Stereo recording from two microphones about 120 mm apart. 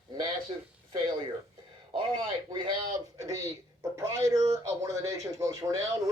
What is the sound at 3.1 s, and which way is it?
Speech, 30° right (ahead or behind).